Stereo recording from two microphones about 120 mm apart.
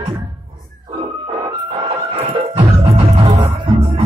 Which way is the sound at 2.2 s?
45° right (ahead or behind).